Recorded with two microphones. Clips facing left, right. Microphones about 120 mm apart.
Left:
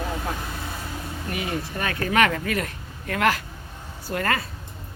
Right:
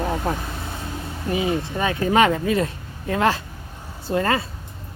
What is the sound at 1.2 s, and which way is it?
Speech, 25° right (ahead or behind).